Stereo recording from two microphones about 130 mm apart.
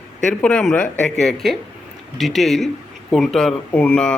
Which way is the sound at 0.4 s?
10° left (ahead or behind).